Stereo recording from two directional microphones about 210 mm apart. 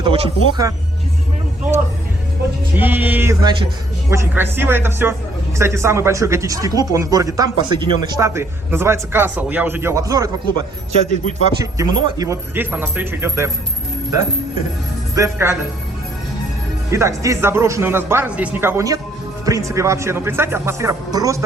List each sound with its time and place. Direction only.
0.0 s speech: 20° right (ahead or behind)
2.7 s a man's voice: 10° right (ahead or behind)
15.1 s speech: 15° right (ahead or behind)
16.9 s a man's voice: 15° right (ahead or behind)